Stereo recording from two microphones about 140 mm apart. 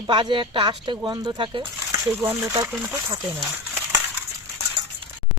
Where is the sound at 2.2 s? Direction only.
15° right (ahead or behind).